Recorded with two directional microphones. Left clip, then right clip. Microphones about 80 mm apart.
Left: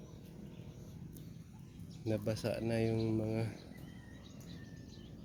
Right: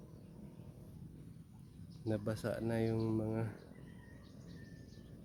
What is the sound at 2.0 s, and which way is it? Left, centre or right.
Speech, centre.